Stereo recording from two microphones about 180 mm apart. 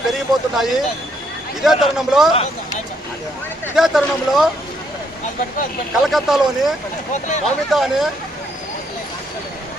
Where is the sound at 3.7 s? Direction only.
Centre (ahead or behind).